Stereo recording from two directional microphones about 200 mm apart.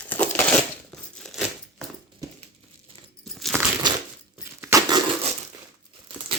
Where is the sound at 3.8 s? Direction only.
20° right (ahead or behind).